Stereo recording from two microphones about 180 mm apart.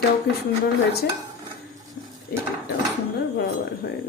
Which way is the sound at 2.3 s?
60° left (ahead or behind).